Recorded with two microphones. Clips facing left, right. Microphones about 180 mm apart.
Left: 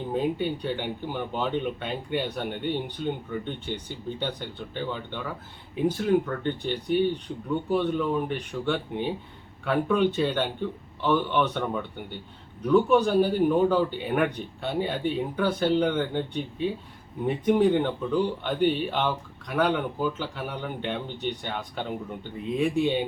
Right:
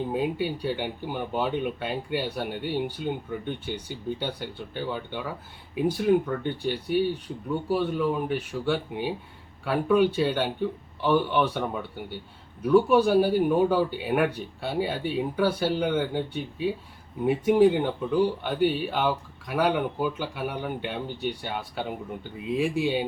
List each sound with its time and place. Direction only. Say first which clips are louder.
0.1 s speech: left 1 dB; 5° right (ahead or behind)